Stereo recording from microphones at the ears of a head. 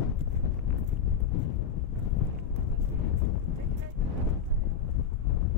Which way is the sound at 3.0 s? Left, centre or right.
Left.